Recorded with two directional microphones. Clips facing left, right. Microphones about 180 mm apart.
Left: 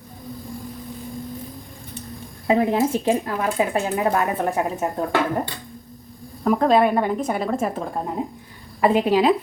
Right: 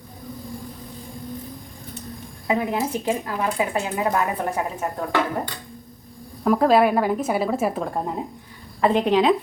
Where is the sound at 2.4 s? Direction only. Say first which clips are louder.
Left 5 dB; 25° left (ahead or behind).